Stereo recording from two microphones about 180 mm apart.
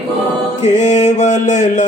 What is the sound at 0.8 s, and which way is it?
Mantra, 40° left (ahead or behind).